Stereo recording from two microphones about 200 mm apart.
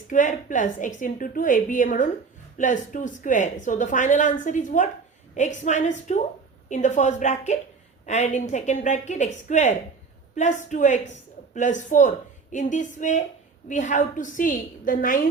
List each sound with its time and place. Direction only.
0.1 s a woman's voice: 40° left (ahead or behind)